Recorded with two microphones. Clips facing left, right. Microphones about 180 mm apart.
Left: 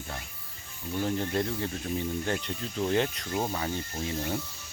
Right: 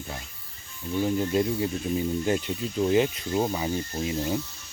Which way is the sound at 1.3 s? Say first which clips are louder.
Right 5 dB; 15° right (ahead or behind).